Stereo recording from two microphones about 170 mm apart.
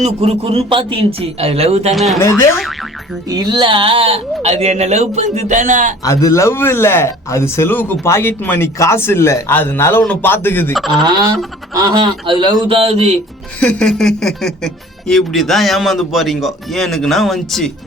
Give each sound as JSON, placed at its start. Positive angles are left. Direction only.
{"t": 0.0, "sound": "speech", "side_deg": -35}
{"t": 1.9, "sound": "speech", "side_deg": 0}
{"t": 3.2, "sound": "speech", "side_deg": -25}
{"t": 6.1, "sound": "speech", "side_deg": 20}
{"t": 10.8, "sound": "speech", "side_deg": 0}
{"t": 11.0, "sound": "speech", "side_deg": -25}
{"t": 13.6, "sound": "speech", "side_deg": 5}